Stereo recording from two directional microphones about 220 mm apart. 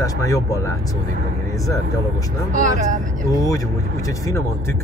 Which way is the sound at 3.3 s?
15° left (ahead or behind).